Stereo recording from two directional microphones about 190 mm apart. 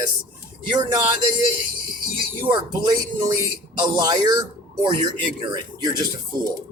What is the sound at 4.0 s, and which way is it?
Speech, 20° right (ahead or behind).